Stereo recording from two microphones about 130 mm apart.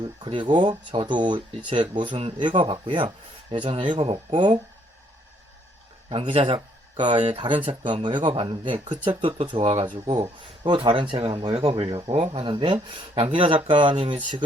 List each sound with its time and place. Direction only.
0.0 s speech: 40° right (ahead or behind)
6.2 s a man's voice: 55° right (ahead or behind)
6.9 s speech: 35° right (ahead or behind)
7.2 s a man's voice: 60° right (ahead or behind)
7.7 s speech: 40° right (ahead or behind)
10.6 s speech: 40° right (ahead or behind)
13.9 s speech: 55° right (ahead or behind)